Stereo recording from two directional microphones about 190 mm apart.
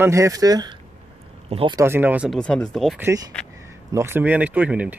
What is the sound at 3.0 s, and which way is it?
Speech, 20° right (ahead or behind).